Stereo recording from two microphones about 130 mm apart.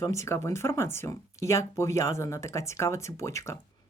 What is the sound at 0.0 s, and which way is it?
Speech, 25° left (ahead or behind).